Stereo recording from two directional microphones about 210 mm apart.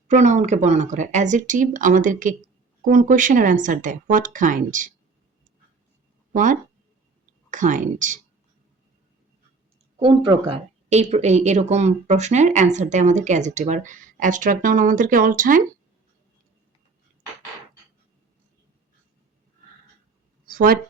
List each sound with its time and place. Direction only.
0.1 s speech: 35° right (ahead or behind)
6.3 s speech: 40° right (ahead or behind)
10.0 s speech: 25° right (ahead or behind); by 15.6 s 40° right (ahead or behind)
20.5 s speech: 45° right (ahead or behind)